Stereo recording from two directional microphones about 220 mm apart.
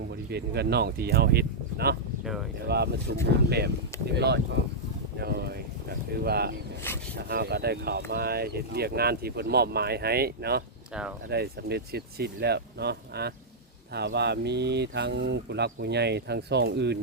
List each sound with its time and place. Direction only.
0.3 s speech: 45° right (ahead or behind)
6.9 s speech: 10° left (ahead or behind)
7.2 s speech: 45° right (ahead or behind)